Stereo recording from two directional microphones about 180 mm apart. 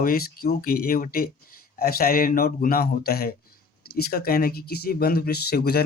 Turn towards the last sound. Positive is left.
turn(degrees=60)  # may be behind; listen again after turning